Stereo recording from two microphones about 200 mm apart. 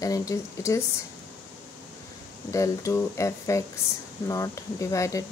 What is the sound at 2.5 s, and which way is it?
A woman's voice, 15° left (ahead or behind).